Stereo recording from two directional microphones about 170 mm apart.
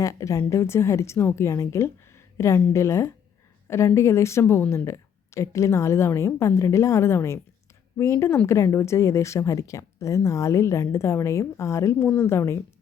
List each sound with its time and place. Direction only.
0.0 s speech: 20° left (ahead or behind)